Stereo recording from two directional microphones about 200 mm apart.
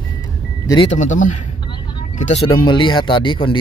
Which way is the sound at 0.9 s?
40° left (ahead or behind).